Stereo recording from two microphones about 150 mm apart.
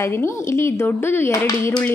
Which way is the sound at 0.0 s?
15° left (ahead or behind).